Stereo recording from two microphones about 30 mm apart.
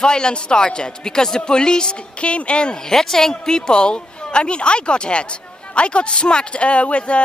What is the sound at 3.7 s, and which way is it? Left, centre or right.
Speech, left.